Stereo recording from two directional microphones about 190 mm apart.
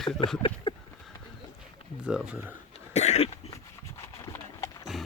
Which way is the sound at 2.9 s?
35° left (ahead or behind).